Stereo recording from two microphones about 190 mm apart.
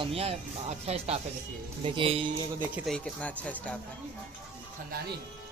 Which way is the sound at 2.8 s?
5° left (ahead or behind).